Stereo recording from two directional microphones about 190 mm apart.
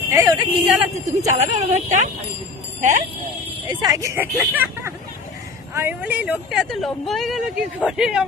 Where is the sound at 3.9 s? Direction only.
15° right (ahead or behind).